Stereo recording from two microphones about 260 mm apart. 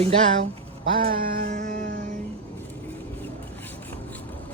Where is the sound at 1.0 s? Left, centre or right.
Right.